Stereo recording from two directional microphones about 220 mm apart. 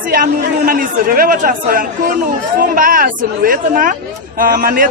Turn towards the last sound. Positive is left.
turn(degrees=-40)  # may be behind; listen again after turning